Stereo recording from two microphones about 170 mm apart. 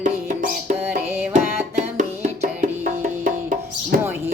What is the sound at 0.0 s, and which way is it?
Music, 50° right (ahead or behind).